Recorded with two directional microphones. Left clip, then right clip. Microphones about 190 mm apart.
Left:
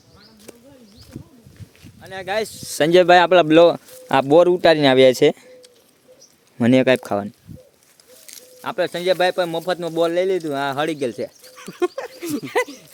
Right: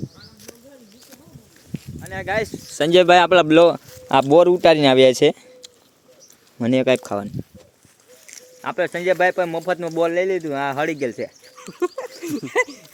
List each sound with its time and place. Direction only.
2.0 s speech: 5° left (ahead or behind)
4.1 s speech: 5° left (ahead or behind)
6.6 s speech: 20° left (ahead or behind)
11.5 s a sound: 45° left (ahead or behind)
12.2 s dog: 45° left (ahead or behind)